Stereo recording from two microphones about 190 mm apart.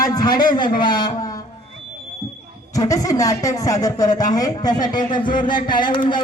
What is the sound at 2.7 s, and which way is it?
Speech, 20° left (ahead or behind).